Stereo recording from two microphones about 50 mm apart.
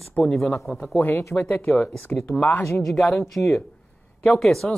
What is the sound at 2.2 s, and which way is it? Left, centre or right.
Speech, left.